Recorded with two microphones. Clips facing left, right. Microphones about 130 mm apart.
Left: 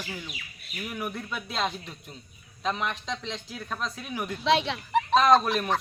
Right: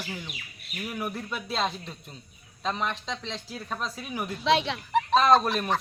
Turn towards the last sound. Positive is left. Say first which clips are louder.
# even
turn(degrees=0)  # may be behind; listen again after turning